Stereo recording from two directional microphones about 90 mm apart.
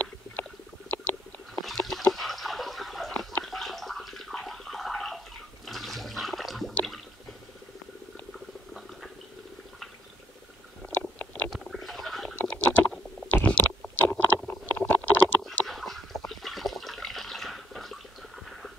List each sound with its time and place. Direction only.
0.0 s a sound: 20° left (ahead or behind); by 3.3 s centre (ahead or behind)
3.4 s bathtub: centre (ahead or behind)
5.7 s toilet flush: centre (ahead or behind)
6.7 s a sound: 5° left (ahead or behind)
11.5 s stomach rumble: centre (ahead or behind)
12.4 s computer keyboard: 10° left (ahead or behind)
14.5 s stomach rumble: 20° left (ahead or behind)
15.6 s water: centre (ahead or behind)